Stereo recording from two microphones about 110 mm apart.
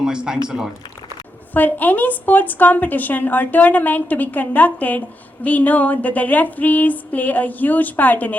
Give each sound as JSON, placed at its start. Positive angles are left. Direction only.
{"t": 0.0, "sound": "speech", "side_deg": -5}
{"t": 1.5, "sound": "a woman's voice", "side_deg": 15}